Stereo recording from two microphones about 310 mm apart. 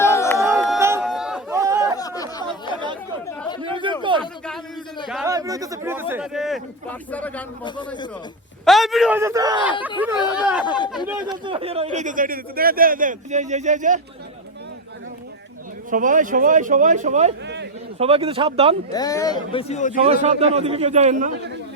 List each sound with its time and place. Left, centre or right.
0.0 s a sound: centre
0.4 s chatter: centre
2.0 s chatter: centre
3.6 s a sound: centre
4.2 s a sound: centre
5.0 s speech: centre
5.3 s speech: centre
8.6 s speech: centre
11.3 s a man's voice: centre
15.9 s a man's voice: right
17.4 s a sound: right
18.0 s speech: centre
18.9 s speech: centre
20.1 s a man's voice: right